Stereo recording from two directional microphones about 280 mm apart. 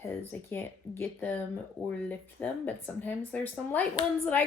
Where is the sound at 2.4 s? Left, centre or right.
Centre.